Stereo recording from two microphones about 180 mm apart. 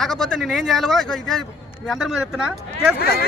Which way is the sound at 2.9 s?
60° left (ahead or behind).